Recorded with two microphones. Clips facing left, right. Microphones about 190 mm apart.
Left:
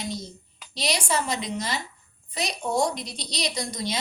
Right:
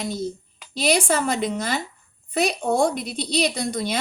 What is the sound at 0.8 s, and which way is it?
A woman's voice, 55° right (ahead or behind).